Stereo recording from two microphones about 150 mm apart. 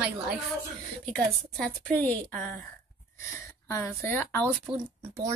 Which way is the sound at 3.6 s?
20° left (ahead or behind).